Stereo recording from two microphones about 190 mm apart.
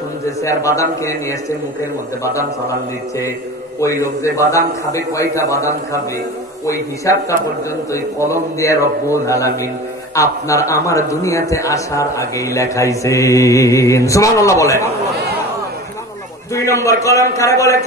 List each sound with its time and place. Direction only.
0.4 s a man's voice: 15° left (ahead or behind)
3.8 s a man's voice: 15° left (ahead or behind)
16.5 s a man's voice: 15° left (ahead or behind)